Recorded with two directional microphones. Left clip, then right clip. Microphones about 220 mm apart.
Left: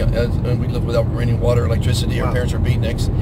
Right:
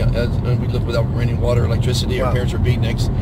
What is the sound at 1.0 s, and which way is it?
Speech, 25° left (ahead or behind).